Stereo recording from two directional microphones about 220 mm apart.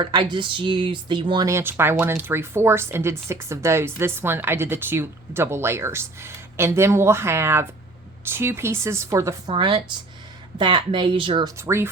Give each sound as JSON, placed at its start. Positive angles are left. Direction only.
{"t": 0.0, "sound": "speech", "side_deg": -20}